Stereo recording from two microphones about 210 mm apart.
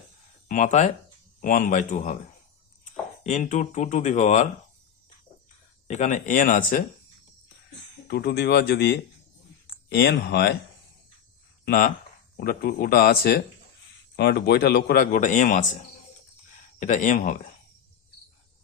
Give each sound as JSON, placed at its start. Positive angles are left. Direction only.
{"t": 0.4, "sound": "speech", "side_deg": 35}
{"t": 3.2, "sound": "speech", "side_deg": 35}
{"t": 5.9, "sound": "speech", "side_deg": 35}
{"t": 8.0, "sound": "a man's voice", "side_deg": 50}
{"t": 11.6, "sound": "a man's voice", "side_deg": 45}
{"t": 16.8, "sound": "speech", "side_deg": 35}